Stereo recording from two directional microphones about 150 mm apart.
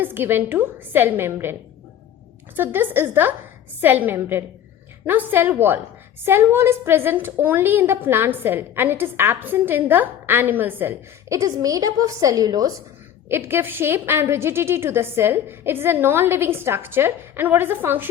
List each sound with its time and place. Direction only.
0.0 s a woman's voice: 15° right (ahead or behind)
2.6 s a woman's voice: 15° right (ahead or behind)